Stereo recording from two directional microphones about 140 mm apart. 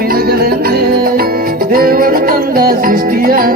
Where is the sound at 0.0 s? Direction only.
90° right.